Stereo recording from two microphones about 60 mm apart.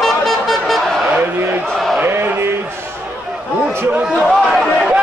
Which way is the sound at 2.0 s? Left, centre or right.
Right.